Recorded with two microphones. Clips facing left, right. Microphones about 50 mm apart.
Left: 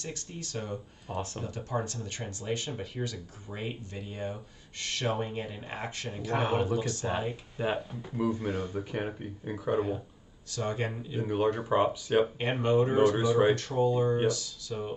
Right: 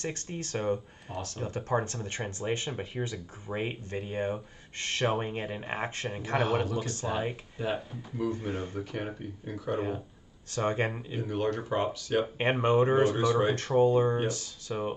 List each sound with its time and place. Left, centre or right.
0.0 s speech: right
1.1 s speech: left
1.4 s speech: right
7.0 s speech: centre
8.5 s speech: right
8.7 s speech: centre
10.5 s speech: right
11.1 s speech: centre
12.4 s speech: right
13.1 s speech: centre
13.6 s speech: right